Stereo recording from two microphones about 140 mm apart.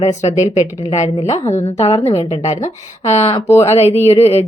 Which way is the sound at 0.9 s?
50° left (ahead or behind).